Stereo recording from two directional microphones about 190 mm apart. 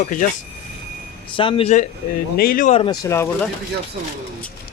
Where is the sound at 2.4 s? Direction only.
45° left (ahead or behind).